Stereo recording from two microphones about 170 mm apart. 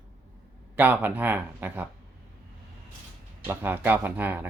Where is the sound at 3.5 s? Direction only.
10° right (ahead or behind).